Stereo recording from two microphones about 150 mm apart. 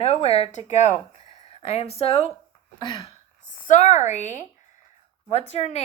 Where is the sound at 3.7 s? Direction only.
50° left (ahead or behind).